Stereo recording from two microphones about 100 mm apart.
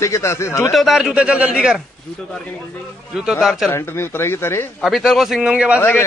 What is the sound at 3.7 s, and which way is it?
Speech, 25° left (ahead or behind).